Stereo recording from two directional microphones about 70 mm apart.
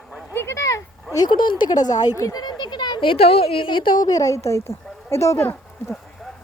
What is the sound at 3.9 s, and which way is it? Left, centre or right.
Speech, left.